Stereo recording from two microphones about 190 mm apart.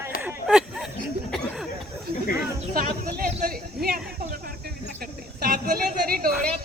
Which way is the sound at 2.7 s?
50° right (ahead or behind).